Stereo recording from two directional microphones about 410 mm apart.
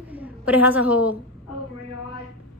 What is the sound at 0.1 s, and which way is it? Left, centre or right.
A woman's voice, centre.